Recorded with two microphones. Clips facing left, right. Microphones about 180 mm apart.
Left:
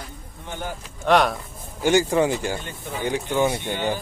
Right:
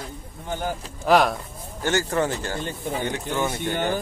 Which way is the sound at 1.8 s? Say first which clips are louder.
Left 4 dB; 15° left (ahead or behind).